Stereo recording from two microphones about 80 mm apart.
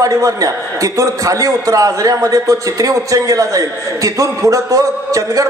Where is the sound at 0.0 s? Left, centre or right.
Right.